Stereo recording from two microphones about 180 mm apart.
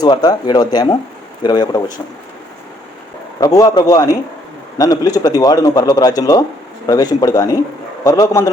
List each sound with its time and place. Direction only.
0.0 s a man's voice: 20° left (ahead or behind)
3.4 s a man's voice: 20° left (ahead or behind)